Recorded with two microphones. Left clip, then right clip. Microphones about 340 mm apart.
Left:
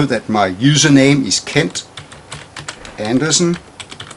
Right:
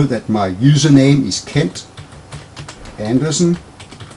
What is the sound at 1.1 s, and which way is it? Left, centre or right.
Typing, centre.